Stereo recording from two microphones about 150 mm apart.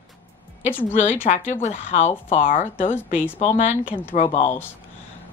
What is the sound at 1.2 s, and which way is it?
Speech, 55° left (ahead or behind).